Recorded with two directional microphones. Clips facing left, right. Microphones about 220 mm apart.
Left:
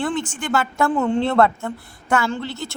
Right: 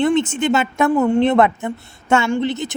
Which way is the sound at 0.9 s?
10° right (ahead or behind).